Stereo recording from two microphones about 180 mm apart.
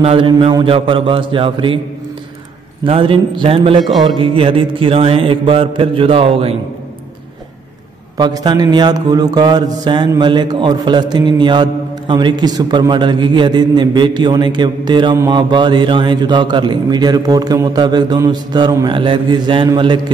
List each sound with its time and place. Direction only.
0.0 s mantra: 30° right (ahead or behind)
2.8 s mantra: 30° right (ahead or behind)
8.2 s mantra: 20° right (ahead or behind)